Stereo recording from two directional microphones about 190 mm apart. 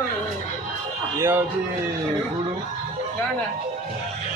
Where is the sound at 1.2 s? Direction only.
10° right (ahead or behind).